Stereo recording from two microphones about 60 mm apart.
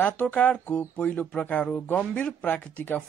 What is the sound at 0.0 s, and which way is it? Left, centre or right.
Speech, left.